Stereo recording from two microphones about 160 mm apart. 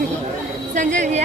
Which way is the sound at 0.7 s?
50° right (ahead or behind).